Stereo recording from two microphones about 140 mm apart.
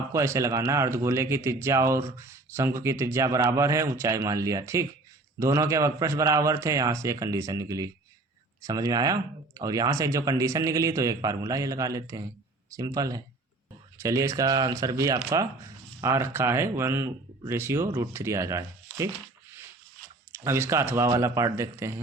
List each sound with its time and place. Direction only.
0.1 s speech: 20° right (ahead or behind)
20.3 s speech: 20° right (ahead or behind)